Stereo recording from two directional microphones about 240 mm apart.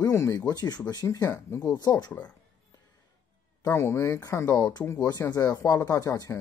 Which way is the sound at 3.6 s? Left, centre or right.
Centre.